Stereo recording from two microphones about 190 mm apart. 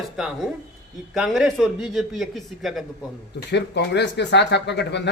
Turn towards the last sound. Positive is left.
turn(degrees=60)  # may be behind; listen again after turning